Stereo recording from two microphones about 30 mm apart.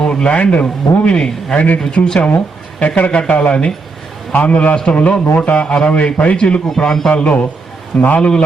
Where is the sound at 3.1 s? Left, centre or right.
Left.